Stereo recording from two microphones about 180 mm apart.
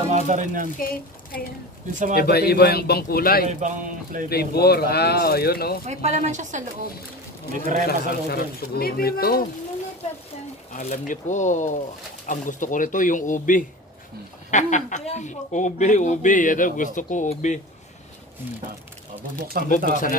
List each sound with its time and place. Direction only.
0.1 s speech: 45° right (ahead or behind)
0.7 s speech: 55° left (ahead or behind)
3.4 s speech: 45° right (ahead or behind)
4.3 s speech: 60° left (ahead or behind)
5.9 s speech: 40° right (ahead or behind)
7.8 s speech: 60° left (ahead or behind)
10.7 s speech: 45° left (ahead or behind)
19.6 s speech: 55° right (ahead or behind)
19.9 s speech: 45° left (ahead or behind)